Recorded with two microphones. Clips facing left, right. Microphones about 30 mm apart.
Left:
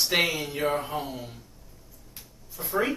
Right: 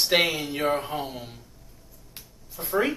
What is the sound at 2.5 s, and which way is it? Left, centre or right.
Speech, right.